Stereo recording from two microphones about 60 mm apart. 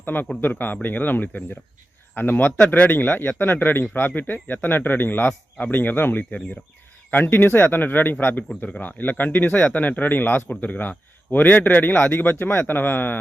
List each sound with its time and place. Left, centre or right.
0.0 s a man's voice: left
1.3 s speech: left
2.1 s a man's voice: left